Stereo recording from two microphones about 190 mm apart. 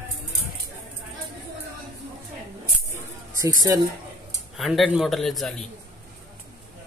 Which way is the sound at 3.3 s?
15° right (ahead or behind).